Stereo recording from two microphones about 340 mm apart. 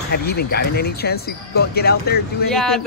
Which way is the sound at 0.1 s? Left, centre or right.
Left.